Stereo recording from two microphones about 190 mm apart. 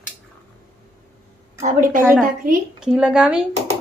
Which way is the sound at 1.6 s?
40° right (ahead or behind).